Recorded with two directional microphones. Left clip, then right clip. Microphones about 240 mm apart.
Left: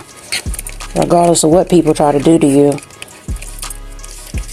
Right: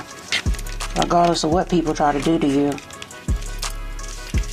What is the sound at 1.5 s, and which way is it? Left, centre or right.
Speech, left.